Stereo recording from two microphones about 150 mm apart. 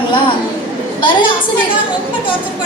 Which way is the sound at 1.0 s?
35° left (ahead or behind).